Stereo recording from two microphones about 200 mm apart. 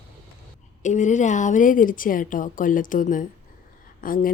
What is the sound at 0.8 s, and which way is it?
A woman's voice, 35° left (ahead or behind).